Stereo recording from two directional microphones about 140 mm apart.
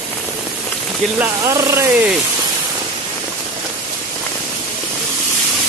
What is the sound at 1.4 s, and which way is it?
Speech, 20° right (ahead or behind).